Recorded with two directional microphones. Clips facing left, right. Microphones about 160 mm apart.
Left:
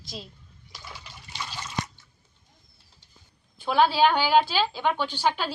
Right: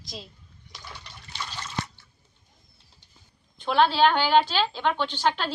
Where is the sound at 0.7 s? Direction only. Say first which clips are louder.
Even; 5° left (ahead or behind).